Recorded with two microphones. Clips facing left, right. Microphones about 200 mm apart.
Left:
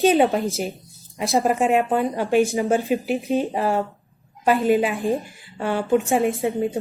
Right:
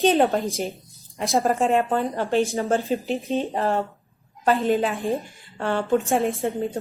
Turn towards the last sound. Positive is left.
turn(degrees=5)  # may be behind; listen again after turning